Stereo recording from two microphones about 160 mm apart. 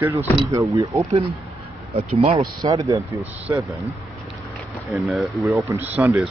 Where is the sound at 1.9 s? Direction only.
40° right (ahead or behind).